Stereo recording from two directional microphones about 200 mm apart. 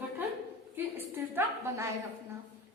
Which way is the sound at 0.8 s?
10° right (ahead or behind).